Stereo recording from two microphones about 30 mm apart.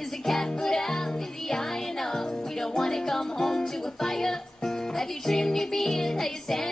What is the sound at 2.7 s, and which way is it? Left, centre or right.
Music, centre.